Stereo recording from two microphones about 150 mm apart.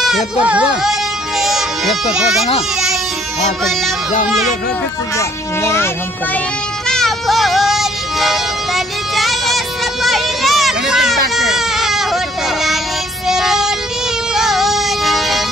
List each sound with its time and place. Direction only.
0.0 s speech: 5° right (ahead or behind)
1.4 s music: centre (ahead or behind)
5.1 s a child's voice: 20° left (ahead or behind)
6.9 s music: centre (ahead or behind)
10.0 s a sound: centre (ahead or behind)
11.3 s baby cry: centre (ahead or behind)
13.3 s vehicle: 5° right (ahead or behind)
14.3 s music: centre (ahead or behind)